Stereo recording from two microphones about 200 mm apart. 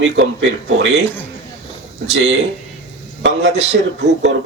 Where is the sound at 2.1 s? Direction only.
60° right (ahead or behind).